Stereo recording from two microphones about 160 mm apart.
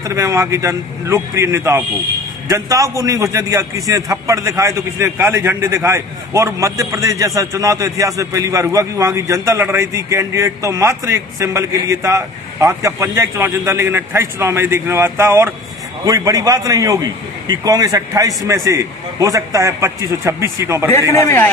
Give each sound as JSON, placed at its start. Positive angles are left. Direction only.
{"t": 0.0, "sound": "a man's voice", "side_deg": -20}
{"t": 21.1, "sound": "a man's voice", "side_deg": 20}